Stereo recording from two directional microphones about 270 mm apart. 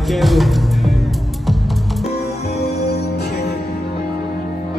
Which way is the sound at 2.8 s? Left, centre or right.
Left.